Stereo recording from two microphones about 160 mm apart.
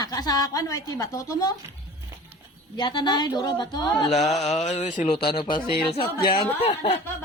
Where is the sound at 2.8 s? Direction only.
30° left (ahead or behind).